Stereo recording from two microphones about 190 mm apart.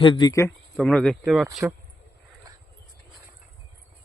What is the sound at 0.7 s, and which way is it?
Speech, 5° left (ahead or behind).